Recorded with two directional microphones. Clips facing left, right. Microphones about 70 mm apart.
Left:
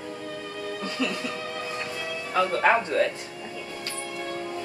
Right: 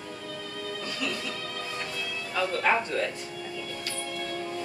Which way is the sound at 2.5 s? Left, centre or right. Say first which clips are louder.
Left 3 dB; left.